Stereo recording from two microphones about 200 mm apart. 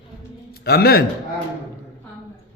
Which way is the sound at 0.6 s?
50° left (ahead or behind).